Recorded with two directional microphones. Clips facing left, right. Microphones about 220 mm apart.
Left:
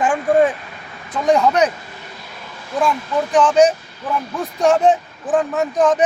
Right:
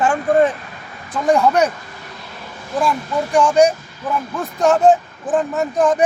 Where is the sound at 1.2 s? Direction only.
5° right (ahead or behind).